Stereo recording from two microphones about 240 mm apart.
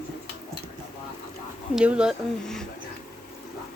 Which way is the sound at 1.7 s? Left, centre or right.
Centre.